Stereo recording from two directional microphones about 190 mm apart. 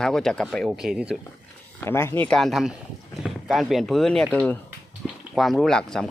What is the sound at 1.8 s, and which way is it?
Speech, 10° left (ahead or behind).